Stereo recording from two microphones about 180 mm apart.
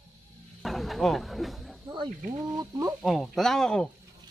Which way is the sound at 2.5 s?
20° right (ahead or behind).